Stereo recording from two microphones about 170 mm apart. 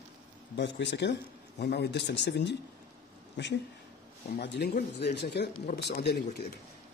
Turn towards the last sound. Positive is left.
turn(degrees=75)  # may be behind; listen again after turning